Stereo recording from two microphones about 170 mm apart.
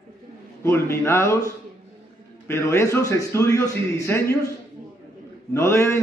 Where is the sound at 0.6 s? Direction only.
15° left (ahead or behind).